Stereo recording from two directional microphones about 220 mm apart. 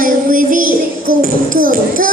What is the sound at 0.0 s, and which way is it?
Music, 40° right (ahead or behind).